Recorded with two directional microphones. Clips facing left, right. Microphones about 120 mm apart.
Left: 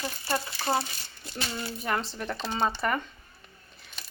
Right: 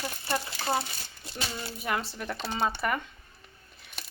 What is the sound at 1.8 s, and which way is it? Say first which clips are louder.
Speech: left 1 dB; 5° right (ahead or behind).